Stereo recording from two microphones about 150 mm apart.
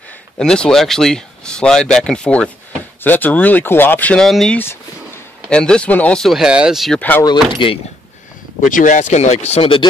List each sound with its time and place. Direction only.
0.4 s speech: 5° left (ahead or behind)
7.0 s speech: 10° left (ahead or behind)
7.5 s speech: 35° left (ahead or behind)
8.6 s speech: 60° left (ahead or behind); by 9.8 s 35° left (ahead or behind)